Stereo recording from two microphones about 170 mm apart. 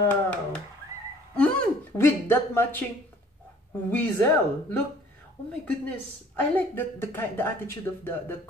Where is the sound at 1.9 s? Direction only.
15° left (ahead or behind).